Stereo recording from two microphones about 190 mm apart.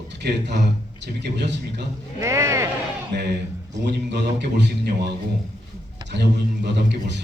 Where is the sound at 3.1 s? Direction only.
60° right (ahead or behind).